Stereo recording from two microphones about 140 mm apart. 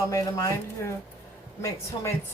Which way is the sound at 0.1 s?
25° left (ahead or behind).